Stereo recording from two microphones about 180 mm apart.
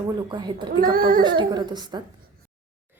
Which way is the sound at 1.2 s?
25° right (ahead or behind).